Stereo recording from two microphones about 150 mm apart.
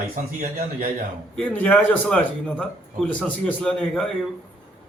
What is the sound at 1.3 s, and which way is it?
A man's voice, 10° left (ahead or behind).